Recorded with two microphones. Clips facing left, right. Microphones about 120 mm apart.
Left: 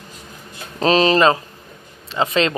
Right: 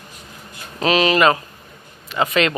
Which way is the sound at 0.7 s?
35° left (ahead or behind).